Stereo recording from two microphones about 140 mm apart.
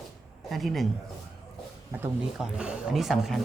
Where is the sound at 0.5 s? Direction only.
Centre (ahead or behind).